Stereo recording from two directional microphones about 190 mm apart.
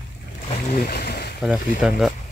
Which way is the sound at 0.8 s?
55° left (ahead or behind).